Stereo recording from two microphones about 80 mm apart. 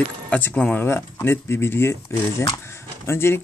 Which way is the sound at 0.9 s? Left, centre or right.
Left.